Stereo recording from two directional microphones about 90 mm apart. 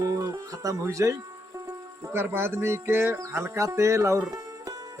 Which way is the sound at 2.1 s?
25° right (ahead or behind).